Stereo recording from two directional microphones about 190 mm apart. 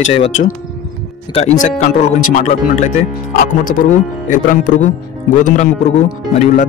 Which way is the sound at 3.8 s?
45° left (ahead or behind).